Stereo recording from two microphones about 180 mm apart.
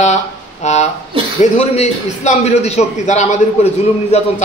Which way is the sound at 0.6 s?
40° left (ahead or behind).